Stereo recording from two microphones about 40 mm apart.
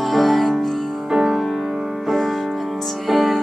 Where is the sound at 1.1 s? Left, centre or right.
Centre.